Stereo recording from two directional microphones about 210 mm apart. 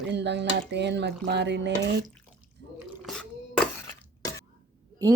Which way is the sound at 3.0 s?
5° left (ahead or behind).